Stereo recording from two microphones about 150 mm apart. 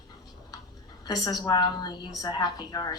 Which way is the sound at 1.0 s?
25° left (ahead or behind).